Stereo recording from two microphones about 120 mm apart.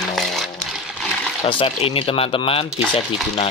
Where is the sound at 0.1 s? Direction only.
Centre (ahead or behind).